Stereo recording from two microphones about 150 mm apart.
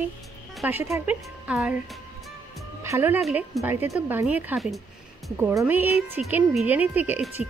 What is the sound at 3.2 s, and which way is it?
Speech, centre (ahead or behind).